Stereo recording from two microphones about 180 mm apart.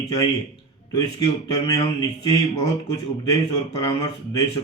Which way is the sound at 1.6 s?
20° left (ahead or behind).